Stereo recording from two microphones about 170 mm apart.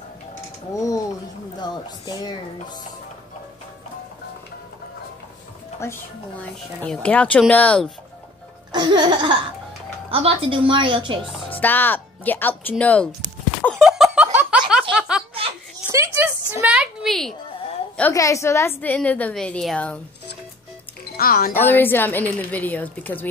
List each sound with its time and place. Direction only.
0.7 s a sound: 20° left (ahead or behind)
1.6 s speech: 25° left (ahead or behind)
5.8 s a woman's voice: 15° left (ahead or behind)
8.7 s music: 25° right (ahead or behind)
10.1 s a woman's voice: 35° right (ahead or behind)
11.5 s a woman's voice: 10° left (ahead or behind)
13.6 s a sound: 5° left (ahead or behind)
14.7 s snicker: 5° right (ahead or behind)
15.9 s a sound: 15° right (ahead or behind)
16.6 s a sound: 5° right (ahead or behind)
18.1 s a woman's voice: 20° left (ahead or behind)
21.2 s speech: 60° left (ahead or behind)
21.5 s a woman's voice: 10° left (ahead or behind)